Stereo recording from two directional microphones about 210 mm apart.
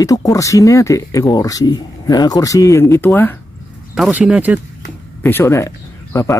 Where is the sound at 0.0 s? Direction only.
15° left (ahead or behind).